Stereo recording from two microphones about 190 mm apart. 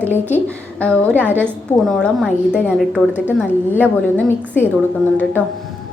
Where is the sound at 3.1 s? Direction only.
10° right (ahead or behind).